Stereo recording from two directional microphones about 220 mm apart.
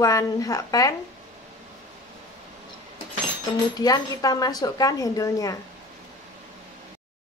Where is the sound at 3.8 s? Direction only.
15° left (ahead or behind).